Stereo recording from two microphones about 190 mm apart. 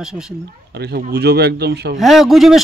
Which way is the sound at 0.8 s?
60° right (ahead or behind).